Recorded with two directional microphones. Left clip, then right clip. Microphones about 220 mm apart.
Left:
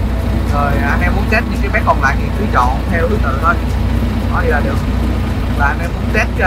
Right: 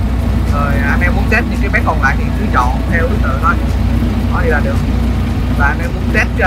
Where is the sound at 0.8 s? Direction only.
10° left (ahead or behind).